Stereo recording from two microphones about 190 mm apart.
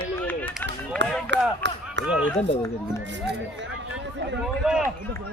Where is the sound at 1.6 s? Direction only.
70° right (ahead or behind).